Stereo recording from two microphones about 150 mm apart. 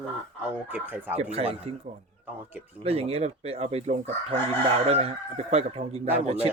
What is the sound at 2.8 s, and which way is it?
Speech, 45° right (ahead or behind).